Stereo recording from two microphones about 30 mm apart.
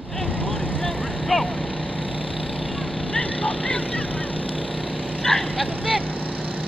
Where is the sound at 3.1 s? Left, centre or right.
Left.